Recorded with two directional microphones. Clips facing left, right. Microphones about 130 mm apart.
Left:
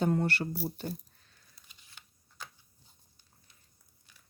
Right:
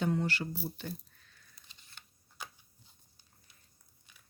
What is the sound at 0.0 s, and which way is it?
Speech, 45° left (ahead or behind).